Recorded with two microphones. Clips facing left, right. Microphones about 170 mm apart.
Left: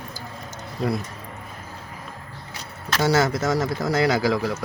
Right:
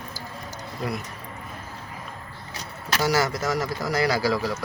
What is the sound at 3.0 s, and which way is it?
Speech, 25° left (ahead or behind).